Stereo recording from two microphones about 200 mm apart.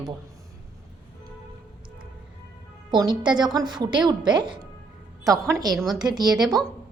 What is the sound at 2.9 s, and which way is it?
A woman's voice, 20° right (ahead or behind).